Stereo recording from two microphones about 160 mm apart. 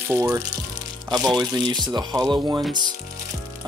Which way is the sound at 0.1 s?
15° right (ahead or behind).